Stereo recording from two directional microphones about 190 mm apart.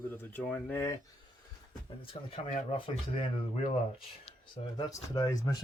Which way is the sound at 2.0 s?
30° left (ahead or behind).